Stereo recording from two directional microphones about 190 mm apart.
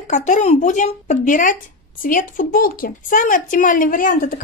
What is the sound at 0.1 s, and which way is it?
Speech, 40° left (ahead or behind).